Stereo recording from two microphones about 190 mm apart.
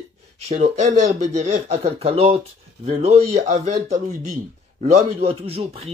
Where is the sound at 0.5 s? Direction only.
35° right (ahead or behind).